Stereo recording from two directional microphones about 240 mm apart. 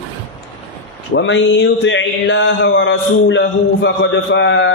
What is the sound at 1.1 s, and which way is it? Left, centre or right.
Mantra, left.